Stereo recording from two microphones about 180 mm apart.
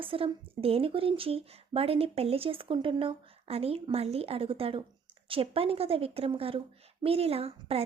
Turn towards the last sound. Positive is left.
turn(degrees=-35)  # may be behind; listen again after turning